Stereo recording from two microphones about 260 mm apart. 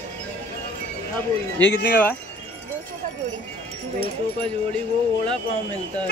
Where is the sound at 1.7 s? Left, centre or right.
Left.